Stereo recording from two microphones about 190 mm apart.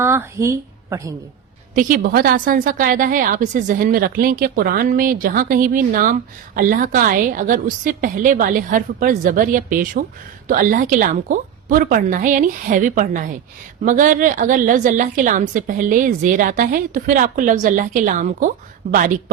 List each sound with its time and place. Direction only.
0.0 s a woman's voice: 15° right (ahead or behind)
1.7 s a woman's voice: 45° right (ahead or behind)